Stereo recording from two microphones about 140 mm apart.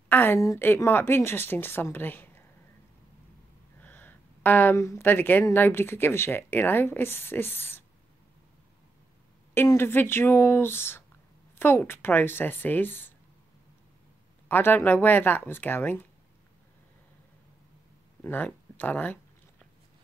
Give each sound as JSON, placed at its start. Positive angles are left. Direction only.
{"t": 0.1, "sound": "speech", "side_deg": 15}
{"t": 3.8, "sound": "speech", "side_deg": 15}
{"t": 9.5, "sound": "speech", "side_deg": 15}
{"t": 14.5, "sound": "speech", "side_deg": 15}
{"t": 18.2, "sound": "speech", "side_deg": 15}